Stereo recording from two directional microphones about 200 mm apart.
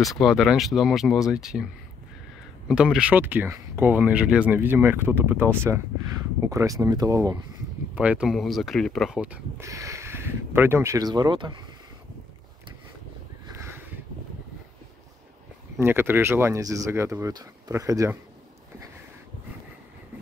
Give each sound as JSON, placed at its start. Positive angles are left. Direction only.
{"t": 0.0, "sound": "speech", "side_deg": 0}
{"t": 2.7, "sound": "speech", "side_deg": -5}
{"t": 7.9, "sound": "speech", "side_deg": -5}
{"t": 15.8, "sound": "speech", "side_deg": -10}